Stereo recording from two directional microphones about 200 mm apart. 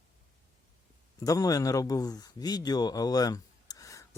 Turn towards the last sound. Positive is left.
turn(degrees=15)  # may be behind; listen again after turning